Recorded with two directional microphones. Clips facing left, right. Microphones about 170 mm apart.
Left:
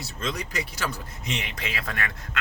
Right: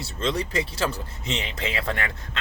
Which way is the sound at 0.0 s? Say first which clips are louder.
Right 5 dB; 30° right (ahead or behind).